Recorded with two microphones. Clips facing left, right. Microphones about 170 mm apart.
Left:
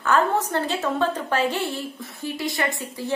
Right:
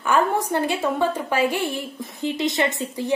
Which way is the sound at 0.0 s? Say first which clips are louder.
Even; 15° right (ahead or behind).